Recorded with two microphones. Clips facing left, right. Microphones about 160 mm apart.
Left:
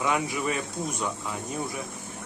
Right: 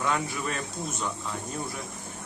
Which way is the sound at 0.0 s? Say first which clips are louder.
Left 2 dB; 10° left (ahead or behind).